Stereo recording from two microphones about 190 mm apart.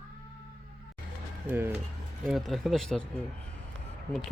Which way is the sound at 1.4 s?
10° right (ahead or behind).